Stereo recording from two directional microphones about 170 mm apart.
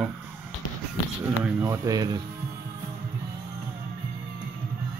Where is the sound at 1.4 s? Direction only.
15° right (ahead or behind).